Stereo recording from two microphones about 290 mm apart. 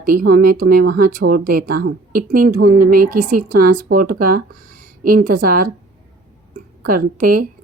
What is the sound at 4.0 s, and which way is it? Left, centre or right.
Speech, right.